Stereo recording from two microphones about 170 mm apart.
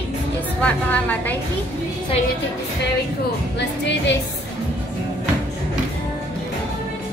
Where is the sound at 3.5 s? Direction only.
90° left.